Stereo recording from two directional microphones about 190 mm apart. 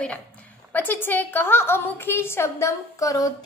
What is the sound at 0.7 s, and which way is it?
A woman's voice, 10° left (ahead or behind).